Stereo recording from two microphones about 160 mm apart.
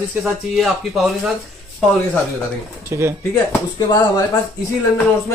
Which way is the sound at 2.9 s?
20° right (ahead or behind).